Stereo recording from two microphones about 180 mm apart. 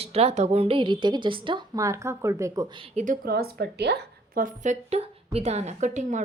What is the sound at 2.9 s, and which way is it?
A woman's voice, 45° right (ahead or behind).